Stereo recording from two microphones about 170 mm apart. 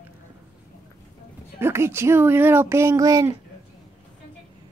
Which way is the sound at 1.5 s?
15° right (ahead or behind).